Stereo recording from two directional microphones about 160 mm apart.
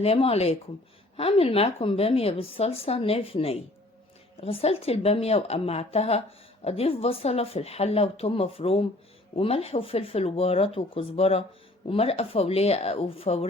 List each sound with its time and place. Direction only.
0.0 s a woman's voice: 35° left (ahead or behind)